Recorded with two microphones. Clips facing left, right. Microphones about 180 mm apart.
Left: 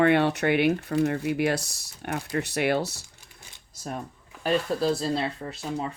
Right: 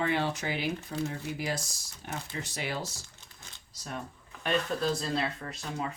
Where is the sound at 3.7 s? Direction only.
50° left (ahead or behind).